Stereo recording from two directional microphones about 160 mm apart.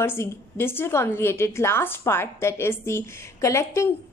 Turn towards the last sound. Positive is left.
turn(degrees=20)  # may be behind; listen again after turning